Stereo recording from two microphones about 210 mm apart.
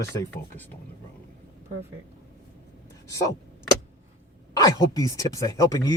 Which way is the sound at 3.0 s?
15° left (ahead or behind).